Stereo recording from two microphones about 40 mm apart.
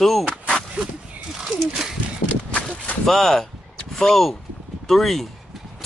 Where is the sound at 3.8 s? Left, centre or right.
Centre.